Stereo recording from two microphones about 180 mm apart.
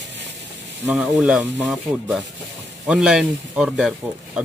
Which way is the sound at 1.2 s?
5° right (ahead or behind).